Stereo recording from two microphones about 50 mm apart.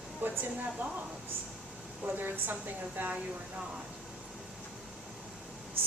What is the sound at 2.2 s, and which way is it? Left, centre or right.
A woman's voice, right.